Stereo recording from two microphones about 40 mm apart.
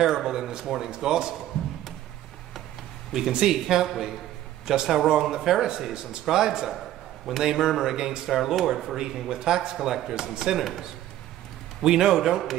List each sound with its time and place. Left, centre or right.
0.2 s speech: centre
3.1 s speech: centre
7.3 s speech: centre
7.6 s speech: centre
8.3 s speech: centre